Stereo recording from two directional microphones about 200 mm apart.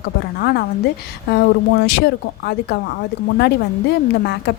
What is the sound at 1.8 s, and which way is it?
Speech, 55° left (ahead or behind).